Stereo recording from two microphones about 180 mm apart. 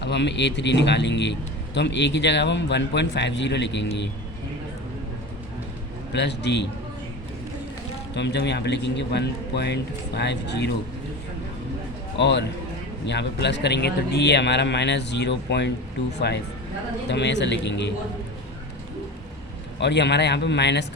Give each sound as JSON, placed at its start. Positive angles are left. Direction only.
{"t": 0.0, "sound": "a man's voice", "side_deg": 75}
{"t": 6.1, "sound": "a man's voice", "side_deg": 75}
{"t": 8.1, "sound": "a man's voice", "side_deg": 70}
{"t": 12.2, "sound": "a man's voice", "side_deg": 75}
{"t": 19.8, "sound": "a man's voice", "side_deg": 70}